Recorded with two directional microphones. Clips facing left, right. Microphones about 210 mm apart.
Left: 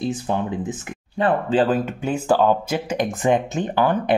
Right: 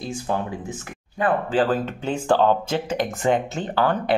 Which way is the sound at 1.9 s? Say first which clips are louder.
Left 1 dB; 10° left (ahead or behind).